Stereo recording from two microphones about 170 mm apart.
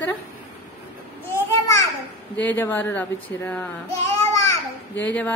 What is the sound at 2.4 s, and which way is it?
A woman's voice, 10° left (ahead or behind).